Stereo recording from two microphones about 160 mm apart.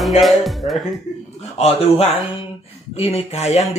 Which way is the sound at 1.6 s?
40° left (ahead or behind).